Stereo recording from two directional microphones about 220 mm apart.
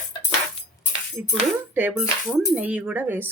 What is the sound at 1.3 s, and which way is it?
Speech, 5° right (ahead or behind).